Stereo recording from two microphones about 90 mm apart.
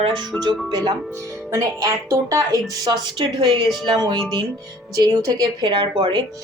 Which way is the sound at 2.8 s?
50° right (ahead or behind).